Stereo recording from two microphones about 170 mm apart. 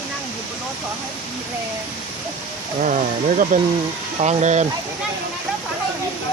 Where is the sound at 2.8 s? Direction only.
50° right (ahead or behind).